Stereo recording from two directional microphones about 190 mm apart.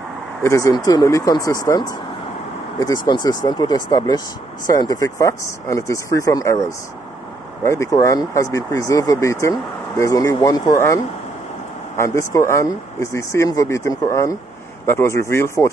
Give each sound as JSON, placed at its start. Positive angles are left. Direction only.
{"t": 0.4, "sound": "speech", "side_deg": 15}
{"t": 7.6, "sound": "speech", "side_deg": 15}
{"t": 12.0, "sound": "speech", "side_deg": 15}